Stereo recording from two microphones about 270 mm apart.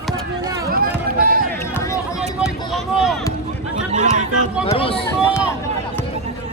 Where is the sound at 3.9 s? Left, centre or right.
Right.